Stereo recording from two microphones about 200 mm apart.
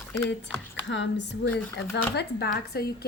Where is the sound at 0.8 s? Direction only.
65° left (ahead or behind).